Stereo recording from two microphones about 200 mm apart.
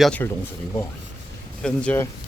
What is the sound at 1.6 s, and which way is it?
Speech, 5° left (ahead or behind).